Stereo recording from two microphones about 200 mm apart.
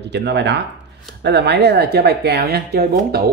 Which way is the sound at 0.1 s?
60° right (ahead or behind).